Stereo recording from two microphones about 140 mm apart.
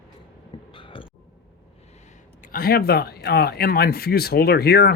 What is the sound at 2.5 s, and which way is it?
Speech, 90° left.